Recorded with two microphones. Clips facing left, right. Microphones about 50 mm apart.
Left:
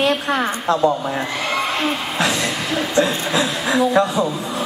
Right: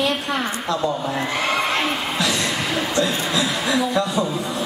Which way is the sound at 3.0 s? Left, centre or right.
Left.